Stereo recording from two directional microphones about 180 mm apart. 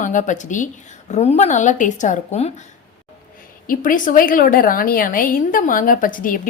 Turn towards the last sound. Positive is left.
turn(degrees=50)  # may be behind; listen again after turning